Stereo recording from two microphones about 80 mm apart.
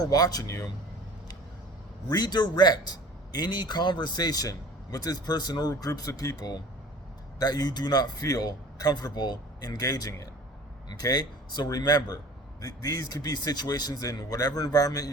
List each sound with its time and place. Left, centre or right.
0.0 s speech: left
2.0 s speech: left